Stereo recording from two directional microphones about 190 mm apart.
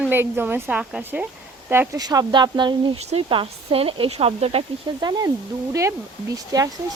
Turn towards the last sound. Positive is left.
turn(degrees=-20)  # may be behind; listen again after turning